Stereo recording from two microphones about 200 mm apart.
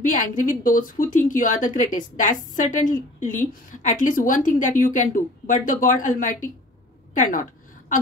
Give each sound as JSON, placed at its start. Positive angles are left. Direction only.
{"t": 0.0, "sound": "speech", "side_deg": 40}